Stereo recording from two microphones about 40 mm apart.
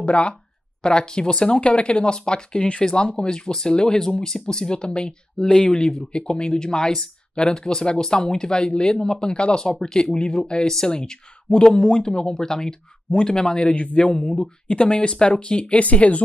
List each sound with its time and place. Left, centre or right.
0.0 s speech: left
14.1 s speech: left
15.6 s speech: left